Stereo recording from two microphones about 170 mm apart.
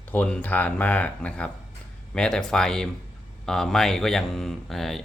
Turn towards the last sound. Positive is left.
turn(degrees=0)  # may be behind; listen again after turning